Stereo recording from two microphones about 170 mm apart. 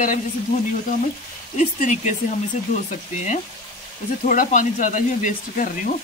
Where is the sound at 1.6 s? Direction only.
45° left (ahead or behind).